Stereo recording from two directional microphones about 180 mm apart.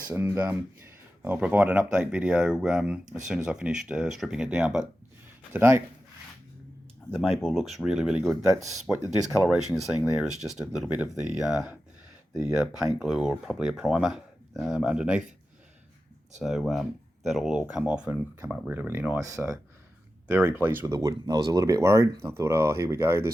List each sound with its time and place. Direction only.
0.1 s speech: 15° right (ahead or behind)
7.1 s speech: centre (ahead or behind)
10.2 s speech: centre (ahead or behind)
16.4 s speech: centre (ahead or behind)